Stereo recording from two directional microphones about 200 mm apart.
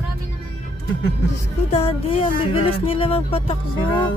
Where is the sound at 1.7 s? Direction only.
30° left (ahead or behind).